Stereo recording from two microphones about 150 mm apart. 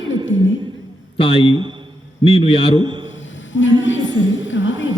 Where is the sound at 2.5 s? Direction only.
35° left (ahead or behind).